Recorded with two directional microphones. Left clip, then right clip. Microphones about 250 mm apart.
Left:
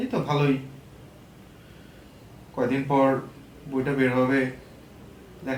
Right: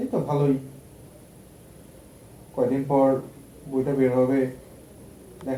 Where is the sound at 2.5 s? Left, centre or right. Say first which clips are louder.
Right 1 dB; left.